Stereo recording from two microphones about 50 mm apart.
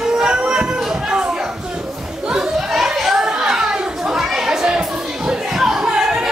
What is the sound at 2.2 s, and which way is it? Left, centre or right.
Children playing, centre.